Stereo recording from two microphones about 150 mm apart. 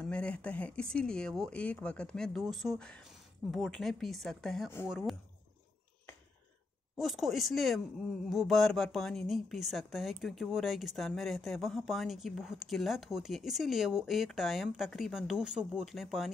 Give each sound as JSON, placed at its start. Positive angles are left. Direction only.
{"t": 0.0, "sound": "speech", "side_deg": 5}
{"t": 7.0, "sound": "speech", "side_deg": 0}